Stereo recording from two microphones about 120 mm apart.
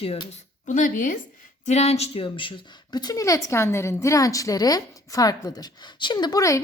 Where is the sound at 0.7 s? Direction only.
90° left.